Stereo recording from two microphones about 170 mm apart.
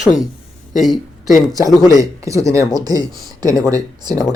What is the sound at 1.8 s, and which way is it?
Speech, 20° right (ahead or behind).